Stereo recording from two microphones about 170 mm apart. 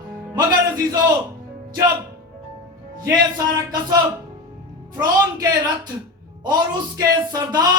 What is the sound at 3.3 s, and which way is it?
Speech, 20° right (ahead or behind).